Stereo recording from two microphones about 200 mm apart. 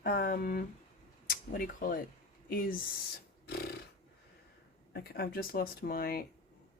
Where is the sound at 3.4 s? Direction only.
55° left (ahead or behind).